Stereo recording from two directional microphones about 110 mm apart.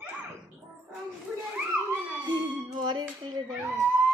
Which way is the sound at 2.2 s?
45° right (ahead or behind).